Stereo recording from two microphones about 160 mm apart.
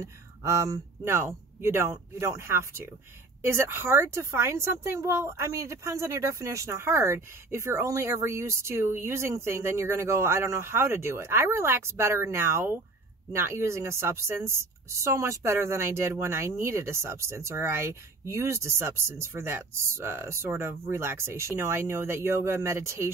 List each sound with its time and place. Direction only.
0.0 s a woman's voice: 20° right (ahead or behind)